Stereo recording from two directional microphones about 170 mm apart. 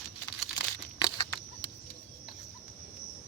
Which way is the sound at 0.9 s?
25° left (ahead or behind).